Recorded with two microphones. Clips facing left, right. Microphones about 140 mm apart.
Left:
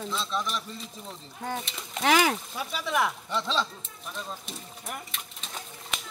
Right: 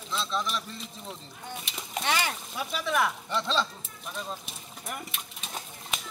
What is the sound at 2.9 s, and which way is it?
Speech, 10° left (ahead or behind).